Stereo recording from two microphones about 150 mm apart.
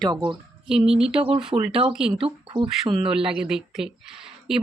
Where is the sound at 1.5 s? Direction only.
20° right (ahead or behind).